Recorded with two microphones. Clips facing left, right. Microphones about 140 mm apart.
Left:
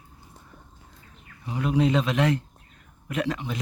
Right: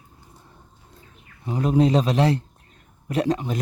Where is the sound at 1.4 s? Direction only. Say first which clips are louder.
Right 4 dB; 40° right (ahead or behind).